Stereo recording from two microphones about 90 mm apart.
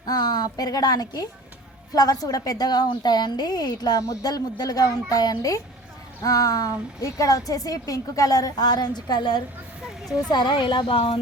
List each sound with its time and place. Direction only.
0.0 s a woman's voice: 50° left (ahead or behind); by 11.2 s 90° left